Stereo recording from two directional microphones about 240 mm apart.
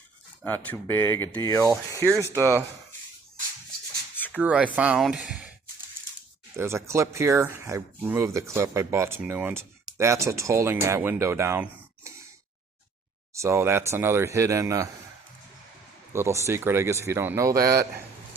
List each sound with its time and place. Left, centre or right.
0.4 s speech: centre
1.6 s speech: centre
4.4 s speech: centre
6.6 s speech: centre
13.3 s speech: centre
16.1 s speech: centre
17.6 s a man's voice: right